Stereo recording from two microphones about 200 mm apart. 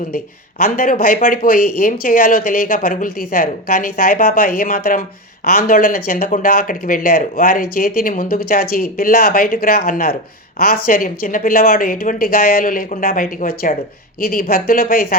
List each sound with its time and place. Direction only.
0.6 s speech: 45° left (ahead or behind)